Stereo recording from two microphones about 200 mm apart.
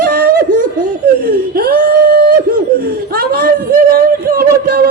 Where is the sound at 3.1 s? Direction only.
45° right (ahead or behind).